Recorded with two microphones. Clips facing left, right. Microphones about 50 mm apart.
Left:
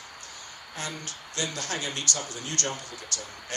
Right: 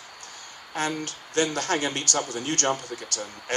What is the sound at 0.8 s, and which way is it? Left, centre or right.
Speech, right.